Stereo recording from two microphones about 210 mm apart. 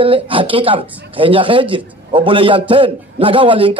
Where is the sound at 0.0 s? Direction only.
25° right (ahead or behind).